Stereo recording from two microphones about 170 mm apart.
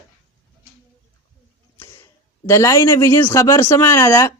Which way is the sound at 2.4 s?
15° left (ahead or behind).